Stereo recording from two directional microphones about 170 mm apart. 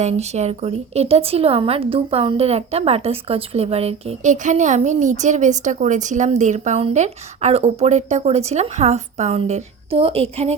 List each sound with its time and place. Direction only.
0.0 s speech: 40° right (ahead or behind)